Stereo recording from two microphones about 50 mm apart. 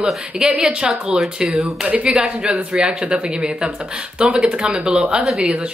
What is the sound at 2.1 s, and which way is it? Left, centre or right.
A woman's voice, centre.